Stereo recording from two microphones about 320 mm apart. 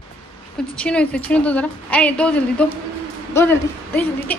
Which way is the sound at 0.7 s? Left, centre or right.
Centre.